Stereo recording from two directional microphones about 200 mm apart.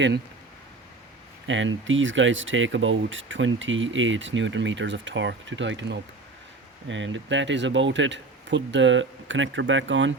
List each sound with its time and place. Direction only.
1.5 s speech: 70° right (ahead or behind)